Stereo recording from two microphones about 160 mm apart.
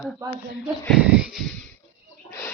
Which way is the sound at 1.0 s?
5° right (ahead or behind).